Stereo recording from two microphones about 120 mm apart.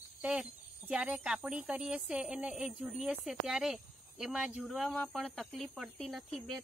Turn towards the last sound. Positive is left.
turn(degrees=0)  # may be behind; listen again after turning